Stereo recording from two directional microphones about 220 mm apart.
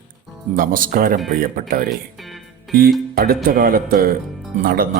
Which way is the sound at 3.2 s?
40° right (ahead or behind).